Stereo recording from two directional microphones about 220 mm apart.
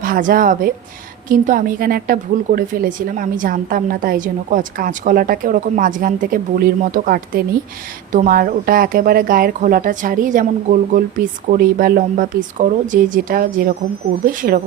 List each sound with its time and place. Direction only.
0.0 s a woman's voice: 40° right (ahead or behind)